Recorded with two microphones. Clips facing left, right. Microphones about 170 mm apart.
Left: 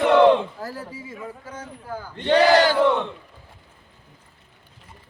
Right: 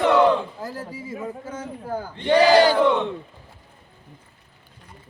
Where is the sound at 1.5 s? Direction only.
30° right (ahead or behind).